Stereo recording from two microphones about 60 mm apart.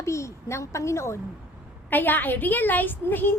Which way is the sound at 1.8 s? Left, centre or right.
Left.